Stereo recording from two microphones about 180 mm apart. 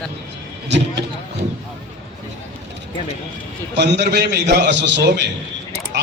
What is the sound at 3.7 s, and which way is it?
A man's voice, 70° right (ahead or behind).